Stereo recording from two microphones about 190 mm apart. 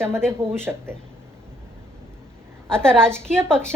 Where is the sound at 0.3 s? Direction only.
10° right (ahead or behind).